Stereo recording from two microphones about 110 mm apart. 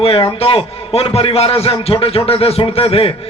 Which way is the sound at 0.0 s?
60° left (ahead or behind).